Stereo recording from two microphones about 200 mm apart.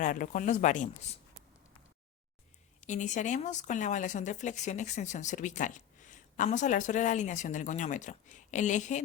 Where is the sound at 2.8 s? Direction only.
35° left (ahead or behind).